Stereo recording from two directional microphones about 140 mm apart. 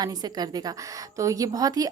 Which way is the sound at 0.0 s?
30° right (ahead or behind).